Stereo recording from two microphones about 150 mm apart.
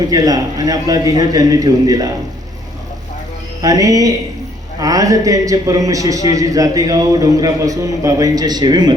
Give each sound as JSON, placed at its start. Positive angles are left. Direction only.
{"t": 0.1, "sound": "a man's voice", "side_deg": -25}
{"t": 3.6, "sound": "a man's voice", "side_deg": -25}